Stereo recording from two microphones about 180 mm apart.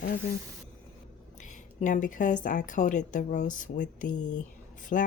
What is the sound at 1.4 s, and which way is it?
Speech, 45° left (ahead or behind).